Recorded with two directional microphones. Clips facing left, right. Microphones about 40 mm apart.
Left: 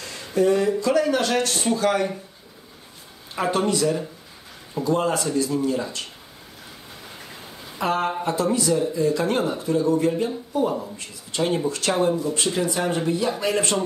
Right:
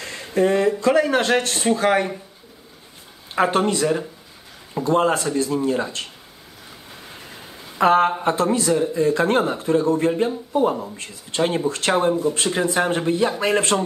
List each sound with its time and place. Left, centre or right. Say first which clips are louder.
0.0 s speech: right 1 dB; right
3.3 s speech: right 3 dB; right
7.8 s speech: right 7 dB; right